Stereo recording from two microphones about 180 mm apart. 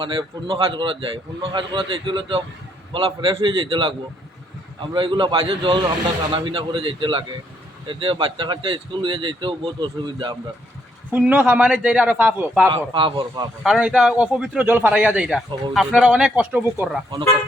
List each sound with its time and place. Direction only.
0.0 s speech: 30° right (ahead or behind)
11.1 s speech: 10° right (ahead or behind)
12.7 s speech: 30° right (ahead or behind)
13.6 s speech: 5° right (ahead or behind)